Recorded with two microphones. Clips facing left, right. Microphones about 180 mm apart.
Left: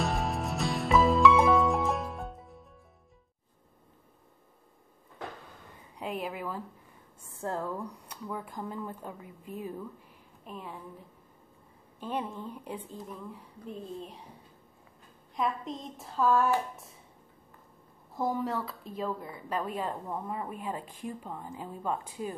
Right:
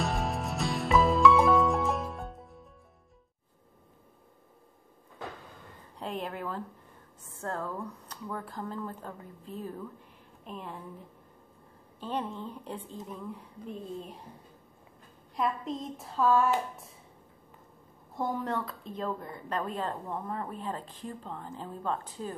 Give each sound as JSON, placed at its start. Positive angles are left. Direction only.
{"t": 0.0, "sound": "music", "side_deg": 0}
{"t": 5.9, "sound": "a woman's voice", "side_deg": 5}
{"t": 7.4, "sound": "a woman's voice", "side_deg": 20}
{"t": 12.0, "sound": "a woman's voice", "side_deg": 10}
{"t": 15.3, "sound": "a woman's voice", "side_deg": 0}
{"t": 18.1, "sound": "a woman's voice", "side_deg": 0}